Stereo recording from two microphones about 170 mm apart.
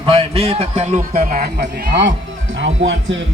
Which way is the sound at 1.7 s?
80° right.